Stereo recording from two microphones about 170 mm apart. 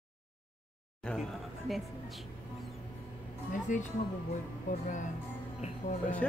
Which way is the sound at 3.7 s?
50° left (ahead or behind).